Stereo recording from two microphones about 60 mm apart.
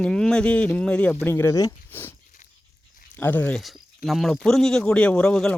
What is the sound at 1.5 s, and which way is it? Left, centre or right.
Speech, left.